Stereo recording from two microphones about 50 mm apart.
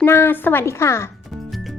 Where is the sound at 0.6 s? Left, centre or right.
Left.